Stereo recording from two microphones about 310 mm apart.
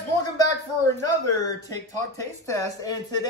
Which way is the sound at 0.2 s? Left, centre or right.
Centre.